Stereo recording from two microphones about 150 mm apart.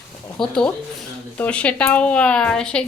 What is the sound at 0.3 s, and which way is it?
A woman's voice, 5° left (ahead or behind).